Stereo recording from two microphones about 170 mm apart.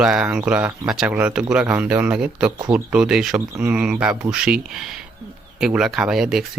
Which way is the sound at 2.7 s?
5° right (ahead or behind).